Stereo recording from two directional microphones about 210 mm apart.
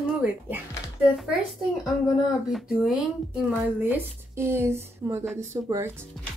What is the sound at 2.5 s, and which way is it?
Speech, centre (ahead or behind).